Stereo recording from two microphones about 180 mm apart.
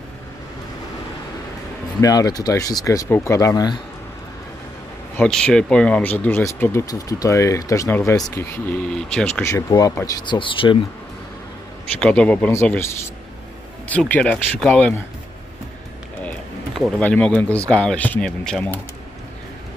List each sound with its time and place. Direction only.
2.0 s speech: 20° left (ahead or behind)
5.1 s speech: 5° left (ahead or behind)
8.4 s speech: 5° left (ahead or behind)
9.4 s speech: 15° left (ahead or behind)
12.0 s speech: 5° left (ahead or behind)
16.7 s speech: 5° left (ahead or behind)